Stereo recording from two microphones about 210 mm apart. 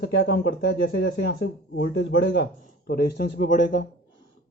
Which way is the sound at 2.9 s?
50° left (ahead or behind).